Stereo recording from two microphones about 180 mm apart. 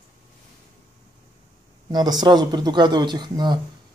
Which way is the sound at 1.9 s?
25° right (ahead or behind).